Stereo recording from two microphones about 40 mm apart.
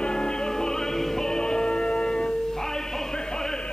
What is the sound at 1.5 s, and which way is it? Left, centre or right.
Music, left.